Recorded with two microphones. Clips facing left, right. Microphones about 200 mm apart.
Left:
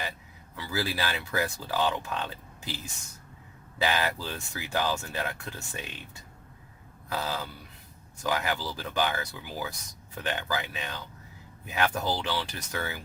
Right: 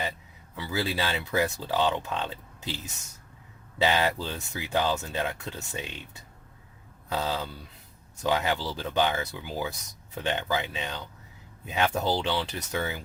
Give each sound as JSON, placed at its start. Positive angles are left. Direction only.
{"t": 0.5, "sound": "speech", "side_deg": -20}
{"t": 3.8, "sound": "speech", "side_deg": -25}
{"t": 7.1, "sound": "speech", "side_deg": -20}